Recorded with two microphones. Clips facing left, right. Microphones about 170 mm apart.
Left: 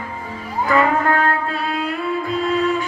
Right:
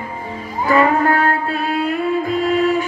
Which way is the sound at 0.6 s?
35° right (ahead or behind).